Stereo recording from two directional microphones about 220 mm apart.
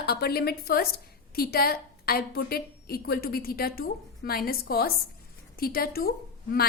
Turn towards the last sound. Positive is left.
turn(degrees=45)  # may be behind; listen again after turning